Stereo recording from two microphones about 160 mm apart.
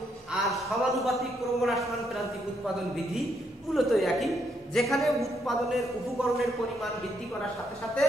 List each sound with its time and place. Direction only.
0.3 s a man's voice: centre (ahead or behind)
3.7 s a woman's voice: centre (ahead or behind)